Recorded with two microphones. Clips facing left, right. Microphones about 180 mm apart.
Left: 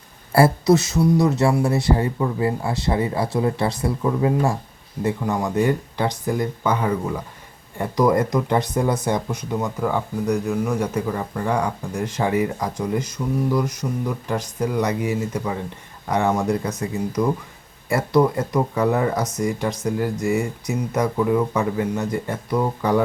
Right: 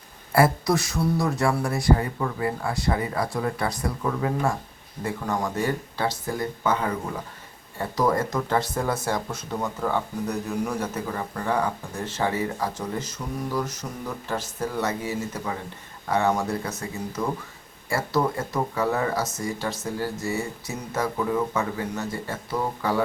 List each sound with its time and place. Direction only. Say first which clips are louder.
0.3 s speech: left 5 dB; 25° left (ahead or behind)
5.2 s speech: left 4 dB; 10° left (ahead or behind)